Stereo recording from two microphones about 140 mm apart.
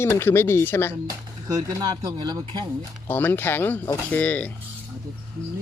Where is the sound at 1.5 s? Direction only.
25° right (ahead or behind).